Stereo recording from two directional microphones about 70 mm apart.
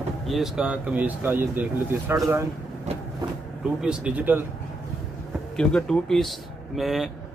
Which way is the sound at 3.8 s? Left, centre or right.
Centre.